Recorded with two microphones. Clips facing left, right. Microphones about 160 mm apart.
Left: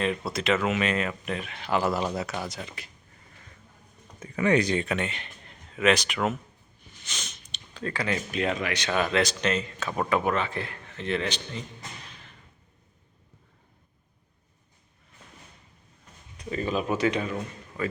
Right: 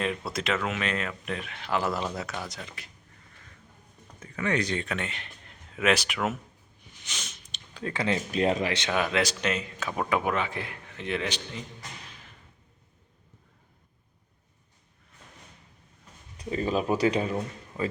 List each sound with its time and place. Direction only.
0.3 s speech: centre (ahead or behind)
4.2 s speech: 10° left (ahead or behind); by 6.3 s 5° right (ahead or behind)
7.0 s sniff: 10° right (ahead or behind)
8.3 s speech: 35° right (ahead or behind)
8.9 s speech: 5° right (ahead or behind)
16.4 s speech: 35° right (ahead or behind)